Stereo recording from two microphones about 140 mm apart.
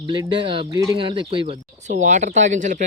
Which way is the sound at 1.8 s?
55° right (ahead or behind).